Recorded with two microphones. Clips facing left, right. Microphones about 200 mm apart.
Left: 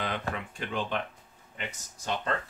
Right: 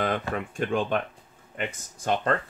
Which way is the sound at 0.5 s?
45° right (ahead or behind).